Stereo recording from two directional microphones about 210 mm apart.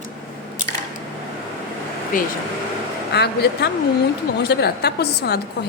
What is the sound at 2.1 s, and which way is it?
A woman's voice, 40° left (ahead or behind).